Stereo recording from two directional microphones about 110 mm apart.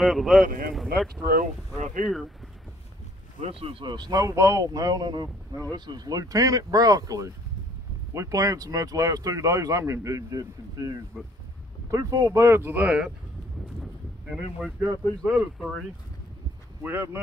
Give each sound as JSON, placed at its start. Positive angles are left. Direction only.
{"t": 0.0, "sound": "speech", "side_deg": 0}
{"t": 3.3, "sound": "speech", "side_deg": -60}
{"t": 3.8, "sound": "speech", "side_deg": -40}
{"t": 15.2, "sound": "speech", "side_deg": 0}
{"t": 16.8, "sound": "speech", "side_deg": -20}